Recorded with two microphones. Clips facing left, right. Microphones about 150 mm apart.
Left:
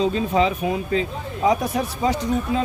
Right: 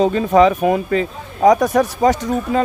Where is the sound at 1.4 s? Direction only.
45° right (ahead or behind).